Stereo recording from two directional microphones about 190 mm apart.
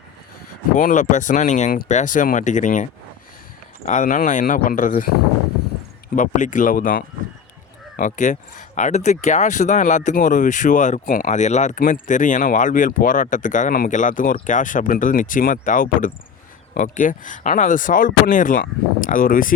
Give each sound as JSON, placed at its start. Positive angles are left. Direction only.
{"t": 0.8, "sound": "speech", "side_deg": 45}
{"t": 3.8, "sound": "speech", "side_deg": 40}